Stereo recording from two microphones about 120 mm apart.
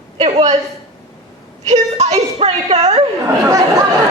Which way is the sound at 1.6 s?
65° right (ahead or behind).